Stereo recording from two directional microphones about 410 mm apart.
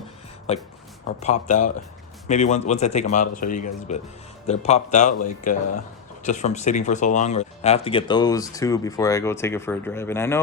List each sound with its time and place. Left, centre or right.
0.5 s speech: centre